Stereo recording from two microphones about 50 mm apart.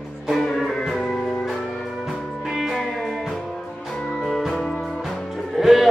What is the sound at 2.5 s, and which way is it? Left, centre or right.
Music, centre.